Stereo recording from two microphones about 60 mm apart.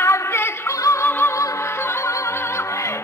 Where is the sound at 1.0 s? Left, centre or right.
Left.